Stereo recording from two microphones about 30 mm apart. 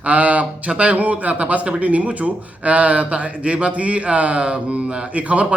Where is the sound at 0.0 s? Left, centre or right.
Right.